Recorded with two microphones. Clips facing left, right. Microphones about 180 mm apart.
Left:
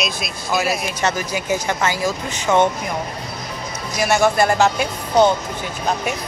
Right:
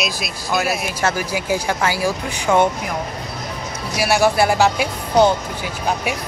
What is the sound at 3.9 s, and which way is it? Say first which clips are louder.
A woman's voice: even; 5° right (ahead or behind).